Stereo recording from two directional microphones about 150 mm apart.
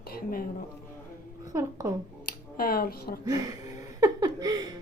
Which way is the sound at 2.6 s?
75° left (ahead or behind).